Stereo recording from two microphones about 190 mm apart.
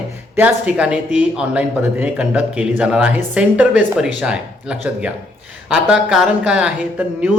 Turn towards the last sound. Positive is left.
turn(degrees=-5)  # may be behind; listen again after turning